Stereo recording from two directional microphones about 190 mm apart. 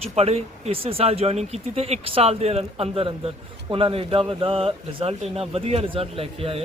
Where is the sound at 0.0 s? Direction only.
30° right (ahead or behind).